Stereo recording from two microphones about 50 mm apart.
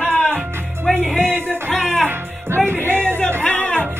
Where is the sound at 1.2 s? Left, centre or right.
Right.